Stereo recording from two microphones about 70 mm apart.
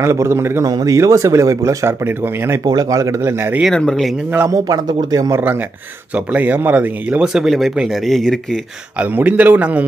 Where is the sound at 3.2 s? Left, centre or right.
Right.